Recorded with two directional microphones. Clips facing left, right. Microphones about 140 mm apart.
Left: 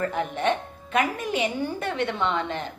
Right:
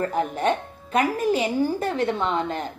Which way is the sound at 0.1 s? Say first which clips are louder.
Right 2 dB; 40° right (ahead or behind).